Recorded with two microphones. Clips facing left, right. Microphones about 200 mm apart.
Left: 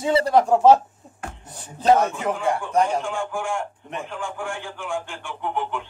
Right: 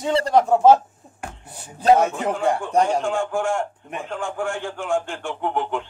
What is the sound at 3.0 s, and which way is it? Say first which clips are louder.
A man's voice: right 5 dB; 45° right (ahead or behind).